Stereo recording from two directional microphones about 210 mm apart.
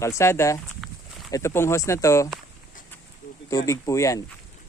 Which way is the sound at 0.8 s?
Centre (ahead or behind).